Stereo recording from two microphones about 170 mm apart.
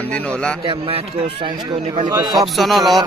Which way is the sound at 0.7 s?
35° right (ahead or behind).